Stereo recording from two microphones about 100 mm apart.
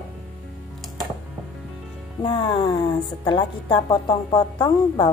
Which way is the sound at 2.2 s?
60° left (ahead or behind).